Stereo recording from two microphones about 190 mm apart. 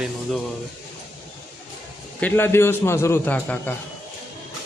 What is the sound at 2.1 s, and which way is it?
A man's voice, 10° left (ahead or behind).